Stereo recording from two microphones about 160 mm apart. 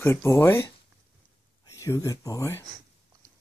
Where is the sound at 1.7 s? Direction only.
20° left (ahead or behind).